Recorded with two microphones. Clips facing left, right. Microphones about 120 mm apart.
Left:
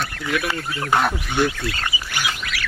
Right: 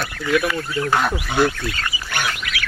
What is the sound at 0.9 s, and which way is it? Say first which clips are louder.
Speech: left 1 dB; 15° left (ahead or behind).